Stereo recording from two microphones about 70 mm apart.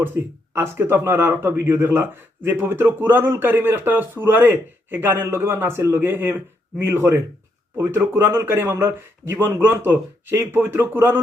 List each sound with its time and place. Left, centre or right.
0.0 s speech: right